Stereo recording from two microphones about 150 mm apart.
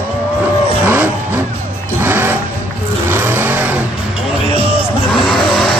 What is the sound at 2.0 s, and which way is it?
Music, 15° right (ahead or behind).